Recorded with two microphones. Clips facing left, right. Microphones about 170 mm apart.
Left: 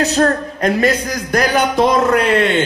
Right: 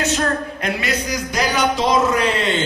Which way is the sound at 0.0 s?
40° left (ahead or behind).